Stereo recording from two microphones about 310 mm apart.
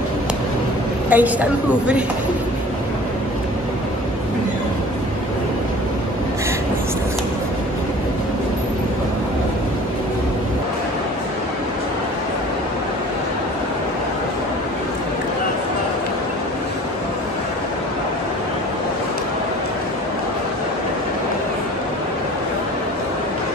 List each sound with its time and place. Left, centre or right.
1.1 s a woman's voice: centre